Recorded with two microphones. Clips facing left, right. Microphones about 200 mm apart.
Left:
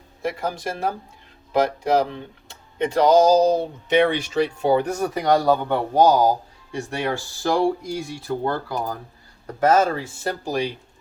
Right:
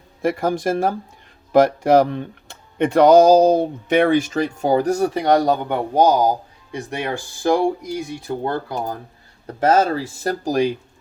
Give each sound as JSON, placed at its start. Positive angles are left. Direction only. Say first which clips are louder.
{"t": 0.2, "sound": "speech", "louder": "right 6 dB", "side_deg": -50}